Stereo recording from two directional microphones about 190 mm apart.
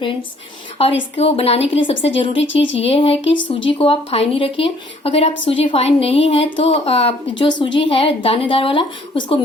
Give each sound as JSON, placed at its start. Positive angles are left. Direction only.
{"t": 1.1, "sound": "a woman's voice", "side_deg": 30}
{"t": 2.4, "sound": "speech", "side_deg": 75}
{"t": 2.8, "sound": "a woman's voice", "side_deg": 30}
{"t": 3.3, "sound": "speech", "side_deg": 80}
{"t": 3.8, "sound": "a woman's voice", "side_deg": 30}